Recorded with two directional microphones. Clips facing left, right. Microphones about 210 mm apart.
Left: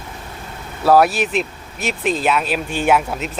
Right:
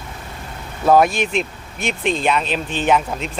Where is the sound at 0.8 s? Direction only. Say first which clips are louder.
Left 1 dB; 5° left (ahead or behind).